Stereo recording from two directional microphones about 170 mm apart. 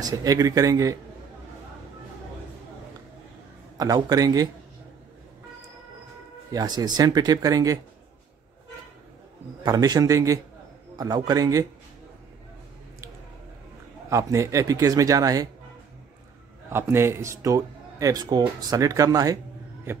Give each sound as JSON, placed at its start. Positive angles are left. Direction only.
{"t": 0.0, "sound": "speech", "side_deg": -20}
{"t": 3.7, "sound": "speech", "side_deg": -20}
{"t": 6.5, "sound": "speech", "side_deg": -25}
{"t": 9.6, "sound": "speech", "side_deg": -25}
{"t": 14.0, "sound": "speech", "side_deg": -20}
{"t": 16.7, "sound": "speech", "side_deg": -15}